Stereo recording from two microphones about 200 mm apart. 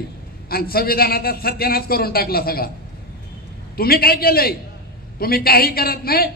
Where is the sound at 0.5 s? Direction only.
50° left (ahead or behind).